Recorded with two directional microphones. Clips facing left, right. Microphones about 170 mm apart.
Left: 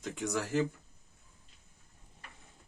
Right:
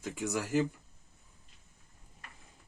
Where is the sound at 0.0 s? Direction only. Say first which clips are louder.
Even; 10° right (ahead or behind).